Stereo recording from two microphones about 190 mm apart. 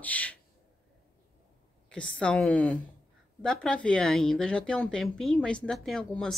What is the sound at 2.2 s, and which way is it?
Speech, 5° left (ahead or behind).